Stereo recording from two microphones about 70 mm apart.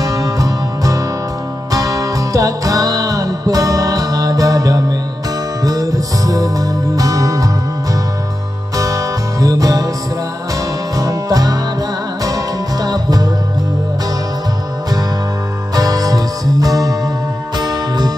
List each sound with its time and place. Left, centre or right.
0.0 s music: right
11.0 s music: right
15.7 s music: right
17.6 s music: right